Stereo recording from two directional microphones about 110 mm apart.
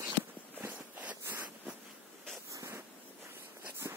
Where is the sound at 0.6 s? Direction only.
15° right (ahead or behind).